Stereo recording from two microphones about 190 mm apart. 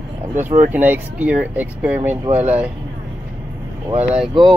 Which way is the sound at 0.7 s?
10° right (ahead or behind).